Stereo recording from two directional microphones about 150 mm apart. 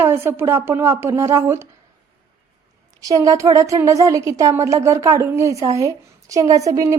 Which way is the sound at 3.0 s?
20° right (ahead or behind).